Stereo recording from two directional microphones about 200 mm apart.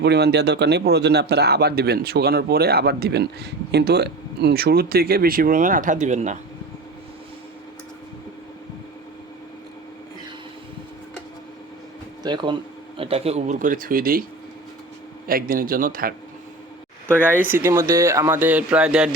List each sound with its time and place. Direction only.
0.0 s a man's voice: 55° right (ahead or behind); by 6.4 s 35° right (ahead or behind)
12.2 s speech: 25° right (ahead or behind); by 14.3 s 45° right (ahead or behind)
15.3 s a man's voice: 45° right (ahead or behind)
17.3 s speech: 10° right (ahead or behind)